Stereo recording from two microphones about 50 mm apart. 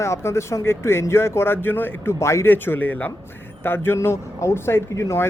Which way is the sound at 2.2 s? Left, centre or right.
Left.